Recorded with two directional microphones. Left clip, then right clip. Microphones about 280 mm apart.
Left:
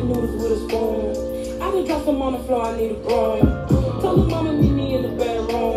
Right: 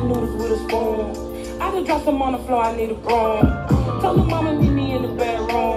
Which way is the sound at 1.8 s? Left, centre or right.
Right.